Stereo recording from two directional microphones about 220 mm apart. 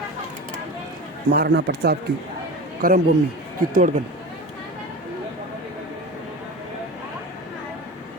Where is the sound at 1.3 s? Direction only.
50° right (ahead or behind).